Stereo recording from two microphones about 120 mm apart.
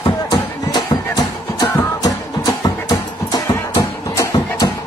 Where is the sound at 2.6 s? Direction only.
30° left (ahead or behind).